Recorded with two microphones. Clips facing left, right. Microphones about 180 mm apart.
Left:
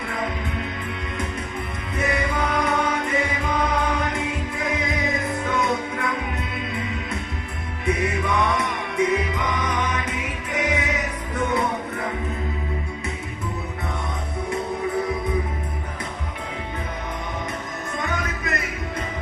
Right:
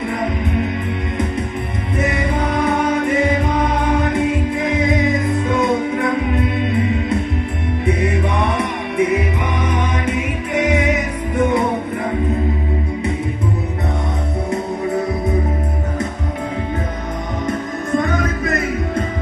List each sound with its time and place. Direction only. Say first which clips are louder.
5.5 s music: right 6 dB; 25° right (ahead or behind)
8.0 s music: right 4 dB; 30° right (ahead or behind)
9.6 s music: right 5 dB; 10° right (ahead or behind)
17.9 s music: right 10 dB; 50° right (ahead or behind)